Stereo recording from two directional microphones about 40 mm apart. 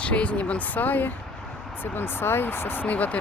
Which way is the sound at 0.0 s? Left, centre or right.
Left.